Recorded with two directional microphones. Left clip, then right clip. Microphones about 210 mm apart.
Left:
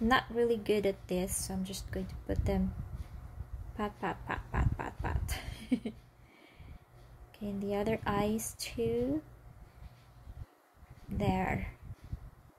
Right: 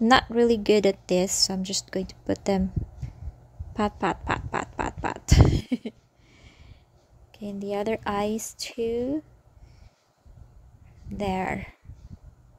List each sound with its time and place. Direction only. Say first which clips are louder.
0.0 s a woman's voice: right 9 dB; 45° right (ahead or behind)
3.7 s a woman's voice: right 10 dB; 45° right (ahead or behind)
11.1 s a woman's voice: right 5 dB; 45° right (ahead or behind)